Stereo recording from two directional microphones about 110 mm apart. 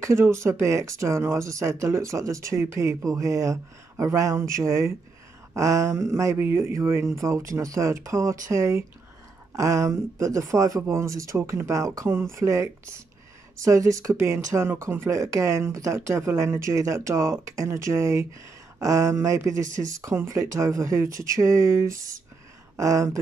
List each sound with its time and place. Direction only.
0.0 s speech: 25° right (ahead or behind)